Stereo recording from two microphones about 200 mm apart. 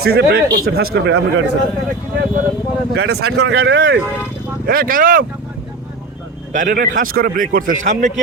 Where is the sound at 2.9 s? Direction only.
55° right (ahead or behind).